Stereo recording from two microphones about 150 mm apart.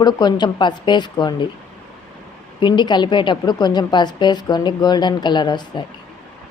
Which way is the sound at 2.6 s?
30° left (ahead or behind).